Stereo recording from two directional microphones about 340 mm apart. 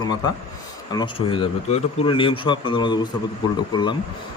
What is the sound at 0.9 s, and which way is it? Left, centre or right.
Speech, centre.